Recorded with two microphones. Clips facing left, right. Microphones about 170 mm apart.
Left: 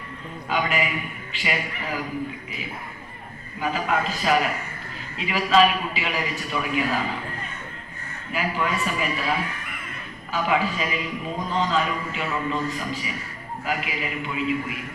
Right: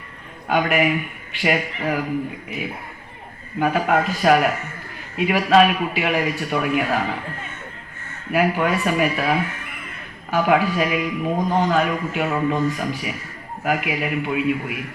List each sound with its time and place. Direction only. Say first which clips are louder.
0.4 s a man's voice: right 6 dB; 55° right (ahead or behind)
3.6 s a man's voice: right 6 dB; 55° right (ahead or behind)
8.3 s a man's voice: right 7 dB; 60° right (ahead or behind)
10.3 s a man's voice: right 6 dB; 60° right (ahead or behind)